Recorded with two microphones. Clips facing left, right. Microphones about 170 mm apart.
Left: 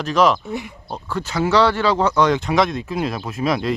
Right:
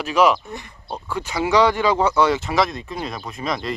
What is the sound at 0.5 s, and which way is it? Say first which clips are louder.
Speech: left 5 dB; 5° left (ahead or behind).